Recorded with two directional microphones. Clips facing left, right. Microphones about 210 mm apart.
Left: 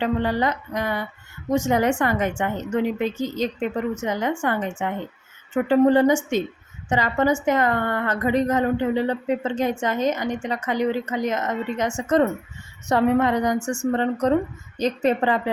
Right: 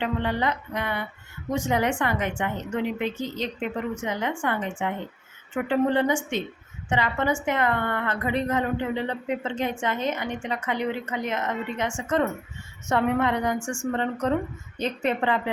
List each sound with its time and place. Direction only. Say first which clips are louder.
0.0 s speech: left 4 dB; 40° left (ahead or behind)